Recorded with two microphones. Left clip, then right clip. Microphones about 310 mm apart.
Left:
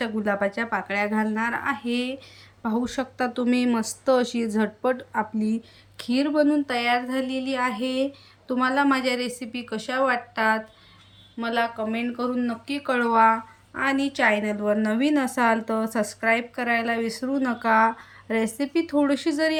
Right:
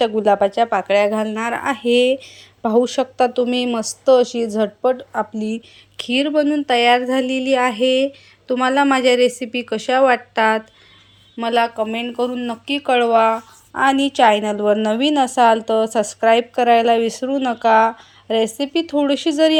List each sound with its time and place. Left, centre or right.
0.0 s speech: centre